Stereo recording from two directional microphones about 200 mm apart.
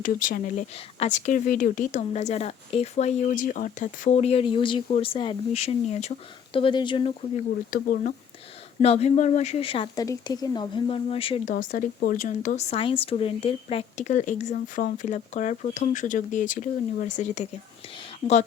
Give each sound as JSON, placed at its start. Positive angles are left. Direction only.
{"t": 0.0, "sound": "speech", "side_deg": 40}
{"t": 7.7, "sound": "speech", "side_deg": 40}
{"t": 8.8, "sound": "speech", "side_deg": 30}
{"t": 11.5, "sound": "speech", "side_deg": 45}